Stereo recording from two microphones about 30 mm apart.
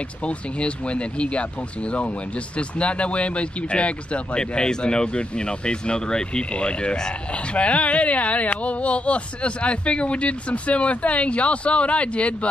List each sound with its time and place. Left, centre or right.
0.2 s speech: left
4.4 s speech: left